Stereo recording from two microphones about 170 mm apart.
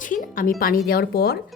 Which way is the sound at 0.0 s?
50° left (ahead or behind).